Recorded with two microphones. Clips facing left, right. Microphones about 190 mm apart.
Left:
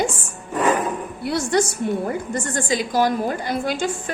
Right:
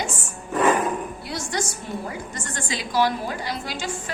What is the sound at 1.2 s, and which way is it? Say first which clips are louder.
A woman's voice: left 13 dB; 60° left (ahead or behind).